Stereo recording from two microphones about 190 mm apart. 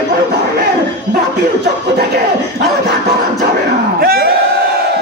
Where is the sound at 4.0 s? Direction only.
55° right (ahead or behind).